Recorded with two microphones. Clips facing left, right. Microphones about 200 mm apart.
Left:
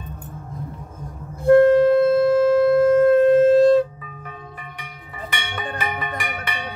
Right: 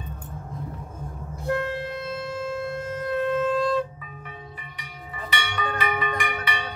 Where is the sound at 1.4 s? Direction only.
55° left (ahead or behind).